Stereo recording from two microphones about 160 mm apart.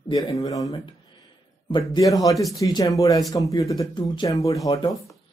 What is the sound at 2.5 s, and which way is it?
Speech, 25° left (ahead or behind).